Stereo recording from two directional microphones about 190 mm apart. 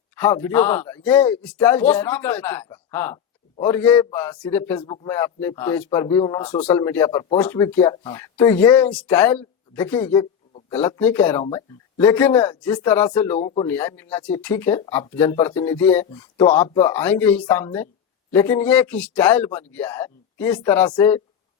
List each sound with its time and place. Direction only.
0.4 s speech: 10° left (ahead or behind)
10.1 s a sound: 30° left (ahead or behind)
10.7 s speech: 10° left (ahead or behind)